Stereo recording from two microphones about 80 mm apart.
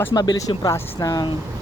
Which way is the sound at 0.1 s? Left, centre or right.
Left.